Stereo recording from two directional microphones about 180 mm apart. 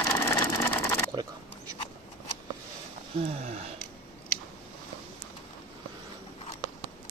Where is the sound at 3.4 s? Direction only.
35° right (ahead or behind).